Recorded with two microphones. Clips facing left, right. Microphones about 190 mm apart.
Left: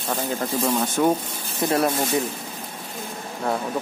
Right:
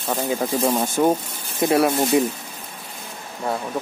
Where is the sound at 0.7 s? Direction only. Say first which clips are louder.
Right 1 dB; 20° right (ahead or behind).